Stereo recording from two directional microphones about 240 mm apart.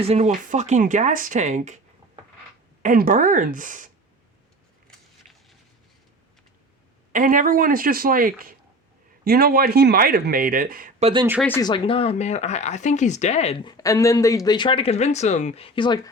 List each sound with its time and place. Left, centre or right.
0.0 s speech: right
2.8 s speech: right
4.9 s biting: centre
7.1 s speech: right
11.4 s speech: centre
11.7 s speech: left
13.7 s speech: centre